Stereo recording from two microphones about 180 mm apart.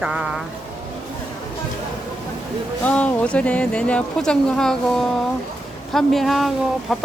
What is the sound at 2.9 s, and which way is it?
Speech, 5° left (ahead or behind).